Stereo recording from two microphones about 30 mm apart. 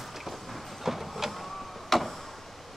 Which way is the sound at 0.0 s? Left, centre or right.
Centre.